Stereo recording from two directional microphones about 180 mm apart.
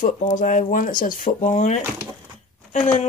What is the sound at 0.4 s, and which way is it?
Speech, 45° left (ahead or behind).